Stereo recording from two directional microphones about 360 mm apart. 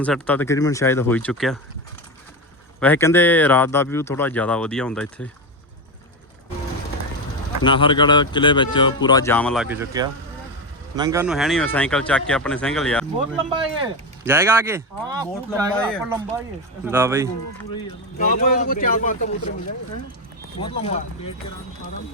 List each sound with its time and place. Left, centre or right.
0.0 s speech: centre
2.8 s speech: centre
7.6 s speech: centre
13.1 s speech: centre
15.7 s speech: centre
16.1 s speech: centre
18.2 s speech: left
20.6 s speech: centre